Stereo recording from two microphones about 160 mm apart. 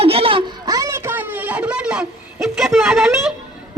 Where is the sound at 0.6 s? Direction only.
20° right (ahead or behind).